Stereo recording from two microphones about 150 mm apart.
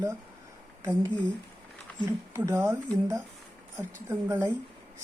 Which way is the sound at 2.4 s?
15° right (ahead or behind).